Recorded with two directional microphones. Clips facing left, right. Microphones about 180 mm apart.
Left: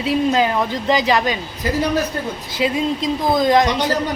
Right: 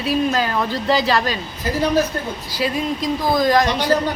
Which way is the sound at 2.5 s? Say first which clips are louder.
Left 2 dB; 25° left (ahead or behind).